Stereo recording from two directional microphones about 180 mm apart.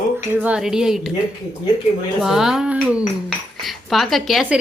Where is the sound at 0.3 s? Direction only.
5° right (ahead or behind).